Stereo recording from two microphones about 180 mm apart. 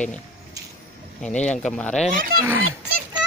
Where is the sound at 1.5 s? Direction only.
5° left (ahead or behind).